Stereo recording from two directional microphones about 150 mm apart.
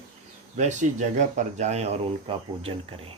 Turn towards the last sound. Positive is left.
turn(degrees=-40)  # may be behind; listen again after turning